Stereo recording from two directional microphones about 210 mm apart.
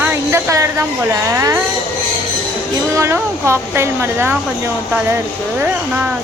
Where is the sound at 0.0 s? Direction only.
10° right (ahead or behind).